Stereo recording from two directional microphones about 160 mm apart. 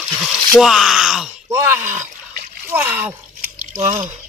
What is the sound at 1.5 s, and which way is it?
Speech, 15° right (ahead or behind).